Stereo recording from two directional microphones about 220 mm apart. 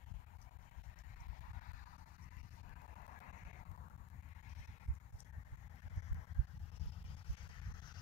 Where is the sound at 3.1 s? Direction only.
40° left (ahead or behind).